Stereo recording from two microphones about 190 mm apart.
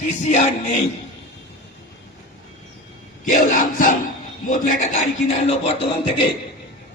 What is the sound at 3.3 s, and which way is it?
A man's voice, 45° left (ahead or behind).